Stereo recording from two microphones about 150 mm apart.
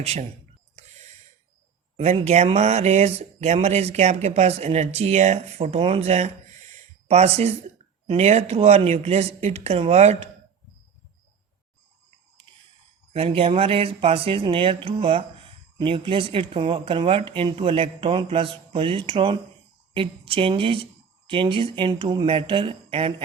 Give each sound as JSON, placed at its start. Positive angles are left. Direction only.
{"t": 0.0, "sound": "speech", "side_deg": -45}
{"t": 2.1, "sound": "speech", "side_deg": -45}
{"t": 6.7, "sound": "a sound", "side_deg": -45}
{"t": 8.0, "sound": "speech", "side_deg": -45}
{"t": 13.1, "sound": "speech", "side_deg": -40}